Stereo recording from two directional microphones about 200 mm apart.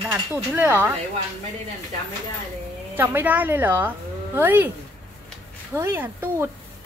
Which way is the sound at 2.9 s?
10° right (ahead or behind).